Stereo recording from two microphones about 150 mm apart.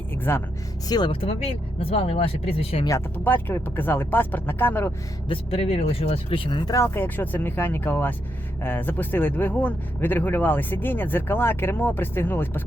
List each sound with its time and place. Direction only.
0.3 s speech: 15° left (ahead or behind)
0.9 s speech: 30° left (ahead or behind)
2.8 s speech: 15° left (ahead or behind)
5.3 s speech: 40° left (ahead or behind)
6.7 s speech: 15° left (ahead or behind)